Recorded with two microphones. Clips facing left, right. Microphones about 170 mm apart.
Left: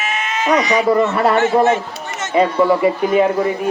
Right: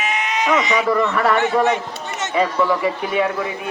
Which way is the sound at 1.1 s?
35° left (ahead or behind).